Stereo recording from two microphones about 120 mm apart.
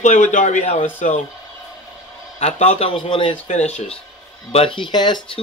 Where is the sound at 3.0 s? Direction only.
50° left (ahead or behind).